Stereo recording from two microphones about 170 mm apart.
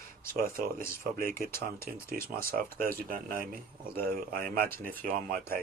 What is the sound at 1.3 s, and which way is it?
Speech, 15° left (ahead or behind).